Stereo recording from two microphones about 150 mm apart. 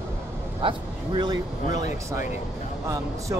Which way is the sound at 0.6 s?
35° right (ahead or behind).